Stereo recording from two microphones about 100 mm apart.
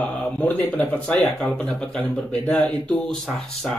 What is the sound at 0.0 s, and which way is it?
Speech, 15° left (ahead or behind).